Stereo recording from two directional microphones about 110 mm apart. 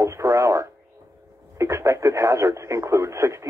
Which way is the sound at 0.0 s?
25° right (ahead or behind).